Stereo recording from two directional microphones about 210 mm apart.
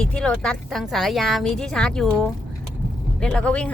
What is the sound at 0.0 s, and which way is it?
Speech, 5° left (ahead or behind).